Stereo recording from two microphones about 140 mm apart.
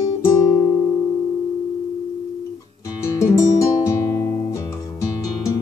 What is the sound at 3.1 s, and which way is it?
Music, 20° left (ahead or behind).